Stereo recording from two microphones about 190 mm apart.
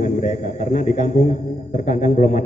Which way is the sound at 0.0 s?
40° left (ahead or behind).